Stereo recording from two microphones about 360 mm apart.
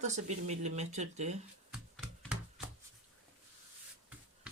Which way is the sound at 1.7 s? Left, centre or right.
Centre.